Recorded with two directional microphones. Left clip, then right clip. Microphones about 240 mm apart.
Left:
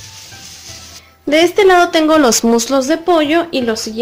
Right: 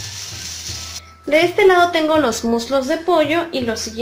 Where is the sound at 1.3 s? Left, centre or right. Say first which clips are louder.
Left 3 dB; left.